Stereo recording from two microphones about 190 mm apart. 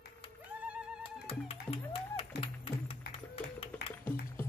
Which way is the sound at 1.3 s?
30° left (ahead or behind).